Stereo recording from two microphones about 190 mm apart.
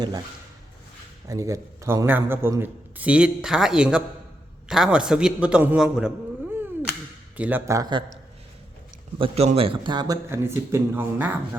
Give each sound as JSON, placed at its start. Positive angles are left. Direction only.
{"t": 1.3, "sound": "a man's voice", "side_deg": -15}
{"t": 6.5, "sound": "a sound", "side_deg": -10}
{"t": 7.3, "sound": "a man's voice", "side_deg": -10}
{"t": 9.1, "sound": "speech", "side_deg": -30}